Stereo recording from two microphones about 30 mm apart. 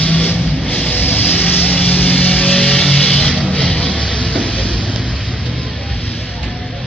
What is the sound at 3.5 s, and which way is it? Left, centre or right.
Vehicle, centre.